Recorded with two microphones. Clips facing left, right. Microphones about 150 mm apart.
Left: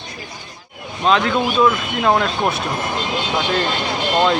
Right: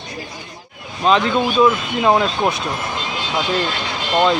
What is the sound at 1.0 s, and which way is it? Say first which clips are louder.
Speech: right 1 dB; centre (ahead or behind).